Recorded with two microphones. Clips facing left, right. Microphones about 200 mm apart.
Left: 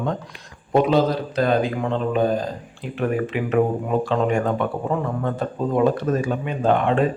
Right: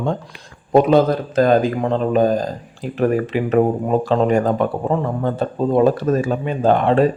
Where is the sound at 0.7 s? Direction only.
50° right (ahead or behind).